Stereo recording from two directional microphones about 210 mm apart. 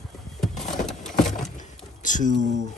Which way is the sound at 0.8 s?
Centre (ahead or behind).